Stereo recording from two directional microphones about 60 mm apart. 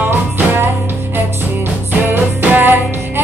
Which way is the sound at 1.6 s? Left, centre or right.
Right.